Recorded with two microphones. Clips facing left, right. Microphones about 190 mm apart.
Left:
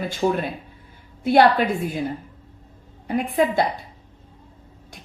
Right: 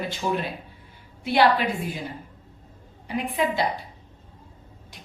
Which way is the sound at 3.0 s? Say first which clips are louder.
Left 5 dB; 45° left (ahead or behind).